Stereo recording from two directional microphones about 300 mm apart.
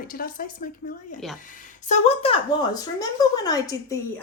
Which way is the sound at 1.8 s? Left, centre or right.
Left.